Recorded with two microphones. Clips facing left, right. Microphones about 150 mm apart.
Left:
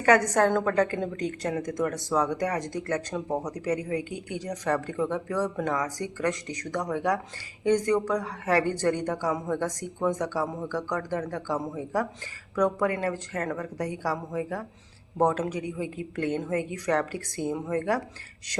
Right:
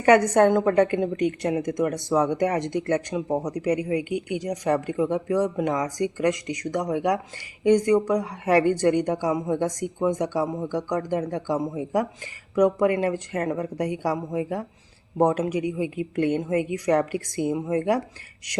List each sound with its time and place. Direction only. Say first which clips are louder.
0.0 s speech: right 4 dB; 20° right (ahead or behind)
3.2 s speech: right 4 dB; 10° right (ahead or behind)